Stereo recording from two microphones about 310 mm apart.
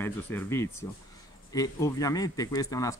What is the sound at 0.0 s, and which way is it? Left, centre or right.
Speech, centre.